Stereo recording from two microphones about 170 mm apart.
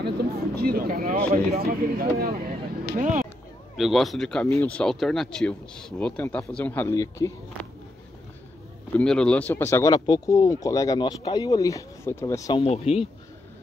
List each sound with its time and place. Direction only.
0.0 s speech: 70° right (ahead or behind)
3.0 s speech: 50° right (ahead or behind)
3.7 s a man's voice: centre (ahead or behind); by 7.3 s 15° left (ahead or behind)
7.6 s a sound: 5° left (ahead or behind)
8.9 s speech: 5° left (ahead or behind)
12.5 s speech: 35° left (ahead or behind)